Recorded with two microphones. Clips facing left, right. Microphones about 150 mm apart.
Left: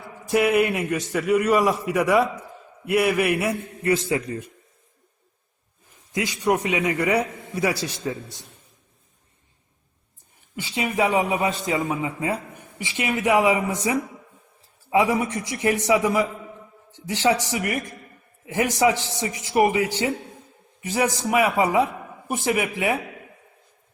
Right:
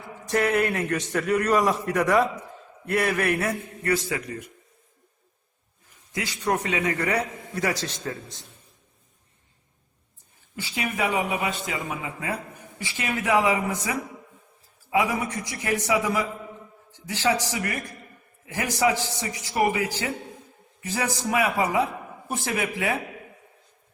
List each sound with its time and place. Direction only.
0.3 s a man's voice: 10° left (ahead or behind)
6.1 s a man's voice: 15° left (ahead or behind)
10.5 s speech: 20° left (ahead or behind)
12.8 s a man's voice: 20° left (ahead or behind)